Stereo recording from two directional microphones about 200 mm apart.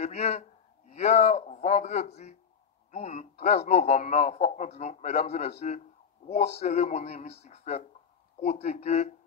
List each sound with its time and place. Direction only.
0.0 s a man's voice: 35° left (ahead or behind)